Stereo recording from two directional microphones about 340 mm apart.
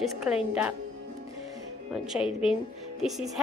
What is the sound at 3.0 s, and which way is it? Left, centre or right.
Music, centre.